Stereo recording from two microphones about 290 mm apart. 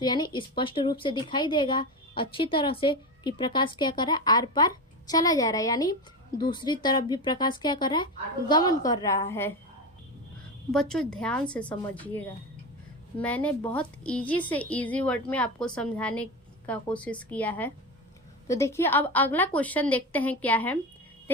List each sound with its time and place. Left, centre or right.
0.0 s speech: centre
10.7 s a woman's voice: centre
13.2 s a woman's voice: centre
21.3 s a sound: centre